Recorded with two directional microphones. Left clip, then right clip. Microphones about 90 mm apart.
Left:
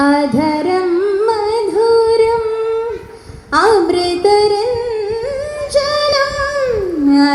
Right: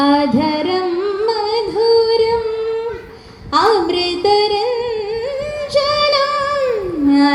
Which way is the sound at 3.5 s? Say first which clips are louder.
Left 2 dB; 60° left (ahead or behind).